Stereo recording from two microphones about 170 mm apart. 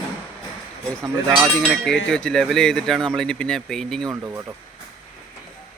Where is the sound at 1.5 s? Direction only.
5° left (ahead or behind).